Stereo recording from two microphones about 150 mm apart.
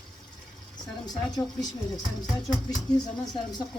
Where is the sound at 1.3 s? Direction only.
25° left (ahead or behind).